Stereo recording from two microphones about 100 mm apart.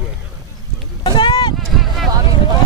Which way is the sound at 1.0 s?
50° left (ahead or behind).